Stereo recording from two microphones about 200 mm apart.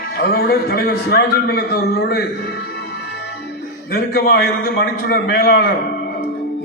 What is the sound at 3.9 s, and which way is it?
A man's voice, 50° left (ahead or behind).